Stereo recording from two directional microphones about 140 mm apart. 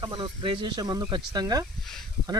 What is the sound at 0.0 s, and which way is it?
Speech, 35° right (ahead or behind).